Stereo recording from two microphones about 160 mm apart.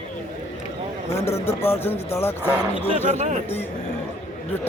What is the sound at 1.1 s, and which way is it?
A man's voice, 15° left (ahead or behind).